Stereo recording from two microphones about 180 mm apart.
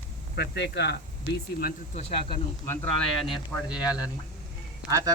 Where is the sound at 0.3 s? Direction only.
70° left (ahead or behind).